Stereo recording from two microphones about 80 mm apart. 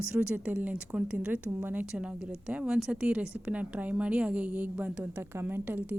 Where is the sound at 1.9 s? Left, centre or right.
Centre.